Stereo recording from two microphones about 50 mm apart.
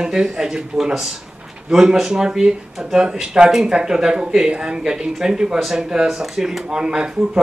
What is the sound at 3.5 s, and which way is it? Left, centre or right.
Speech, centre.